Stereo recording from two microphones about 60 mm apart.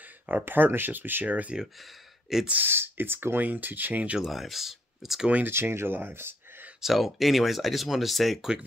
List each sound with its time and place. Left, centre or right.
0.0 s speech: right
1.6 s speech: centre
2.6 s speech: right
4.2 s speech: centre
5.4 s speech: right
6.8 s speech: centre